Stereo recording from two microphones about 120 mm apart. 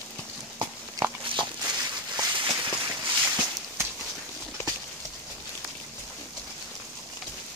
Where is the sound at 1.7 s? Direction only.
40° right (ahead or behind).